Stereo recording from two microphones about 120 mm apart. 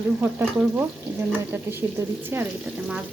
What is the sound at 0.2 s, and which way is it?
Frying, 15° right (ahead or behind).